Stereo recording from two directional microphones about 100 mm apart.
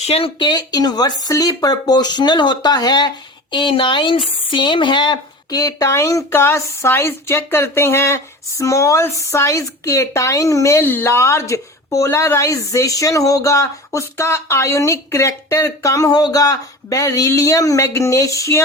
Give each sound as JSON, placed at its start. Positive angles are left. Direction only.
{"t": 0.0, "sound": "speech", "side_deg": 90}
{"t": 0.3, "sound": "speech", "side_deg": 45}
{"t": 3.5, "sound": "speech", "side_deg": 55}